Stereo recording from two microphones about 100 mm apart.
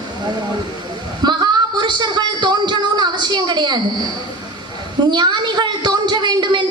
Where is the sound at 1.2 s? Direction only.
50° right (ahead or behind).